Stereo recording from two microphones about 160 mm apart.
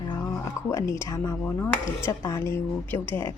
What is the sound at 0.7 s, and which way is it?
A woman's voice, 20° left (ahead or behind).